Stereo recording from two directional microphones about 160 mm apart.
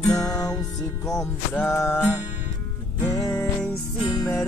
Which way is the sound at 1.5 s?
10° left (ahead or behind).